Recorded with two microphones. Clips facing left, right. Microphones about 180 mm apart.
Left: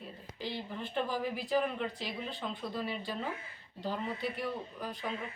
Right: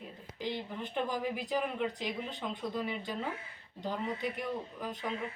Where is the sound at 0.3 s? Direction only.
15° right (ahead or behind).